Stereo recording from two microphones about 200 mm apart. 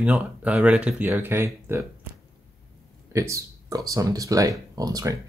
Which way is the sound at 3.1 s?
15° right (ahead or behind).